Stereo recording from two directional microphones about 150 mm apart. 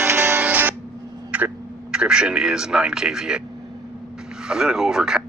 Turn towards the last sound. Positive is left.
turn(degrees=-5)  # may be behind; listen again after turning